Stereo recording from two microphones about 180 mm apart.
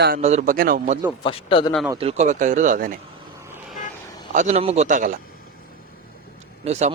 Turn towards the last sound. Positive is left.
turn(degrees=-40)  # may be behind; listen again after turning